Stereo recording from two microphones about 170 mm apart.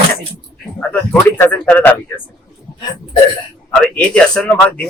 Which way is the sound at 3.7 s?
5° left (ahead or behind).